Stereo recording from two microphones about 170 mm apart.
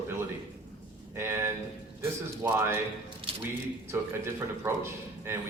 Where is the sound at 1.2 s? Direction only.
15° right (ahead or behind).